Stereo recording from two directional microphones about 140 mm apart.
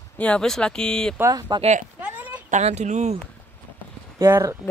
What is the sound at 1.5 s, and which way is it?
Speech, 55° right (ahead or behind).